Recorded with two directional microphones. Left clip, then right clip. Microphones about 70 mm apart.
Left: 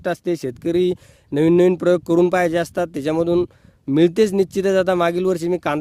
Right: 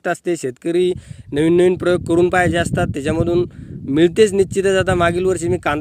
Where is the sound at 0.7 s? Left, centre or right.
Left.